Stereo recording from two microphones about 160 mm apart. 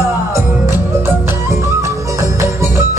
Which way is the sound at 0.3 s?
15° right (ahead or behind).